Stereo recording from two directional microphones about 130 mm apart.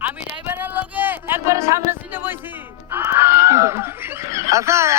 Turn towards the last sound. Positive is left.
turn(degrees=-20)  # may be behind; listen again after turning